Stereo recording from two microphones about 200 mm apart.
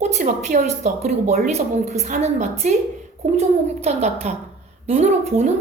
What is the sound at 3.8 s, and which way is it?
A woman's voice, 35° right (ahead or behind).